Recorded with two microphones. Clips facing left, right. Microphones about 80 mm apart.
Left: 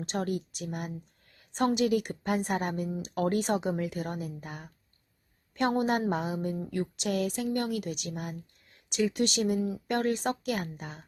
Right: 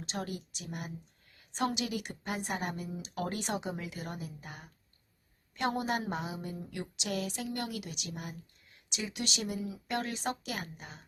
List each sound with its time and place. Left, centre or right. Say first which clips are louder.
0.0 s a woman's voice: left 7 dB; left